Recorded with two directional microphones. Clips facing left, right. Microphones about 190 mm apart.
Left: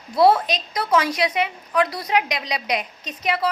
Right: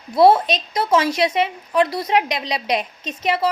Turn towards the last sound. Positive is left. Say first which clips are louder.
# right 3 dB
turn(degrees=-25)  # may be behind; listen again after turning